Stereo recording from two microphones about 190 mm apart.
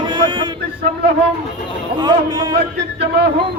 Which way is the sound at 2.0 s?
20° right (ahead or behind).